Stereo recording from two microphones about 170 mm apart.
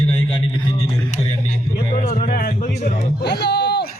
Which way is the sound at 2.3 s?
55° left (ahead or behind).